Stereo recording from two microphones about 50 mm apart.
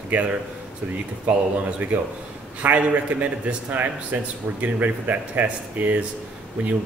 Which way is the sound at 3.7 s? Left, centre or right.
Right.